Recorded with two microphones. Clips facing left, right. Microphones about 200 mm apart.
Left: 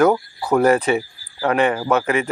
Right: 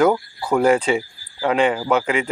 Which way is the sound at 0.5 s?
15° right (ahead or behind).